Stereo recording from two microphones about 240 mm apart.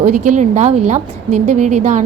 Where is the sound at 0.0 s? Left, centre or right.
Right.